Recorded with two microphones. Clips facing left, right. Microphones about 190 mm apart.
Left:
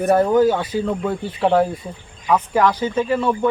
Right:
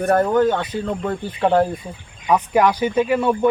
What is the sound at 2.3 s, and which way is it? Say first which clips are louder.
Speech: right 1 dB; 15° right (ahead or behind).